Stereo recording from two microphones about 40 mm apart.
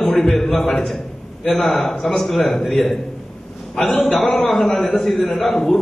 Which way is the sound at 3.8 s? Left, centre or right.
Left.